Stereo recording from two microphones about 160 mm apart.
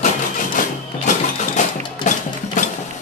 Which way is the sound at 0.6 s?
55° left (ahead or behind).